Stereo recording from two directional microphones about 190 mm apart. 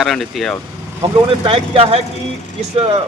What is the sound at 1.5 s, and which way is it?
A man's voice, 30° right (ahead or behind).